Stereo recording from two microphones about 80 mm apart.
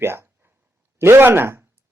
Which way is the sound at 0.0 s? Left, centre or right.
Right.